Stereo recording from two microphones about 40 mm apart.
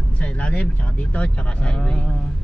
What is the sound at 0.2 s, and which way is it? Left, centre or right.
Speech, left.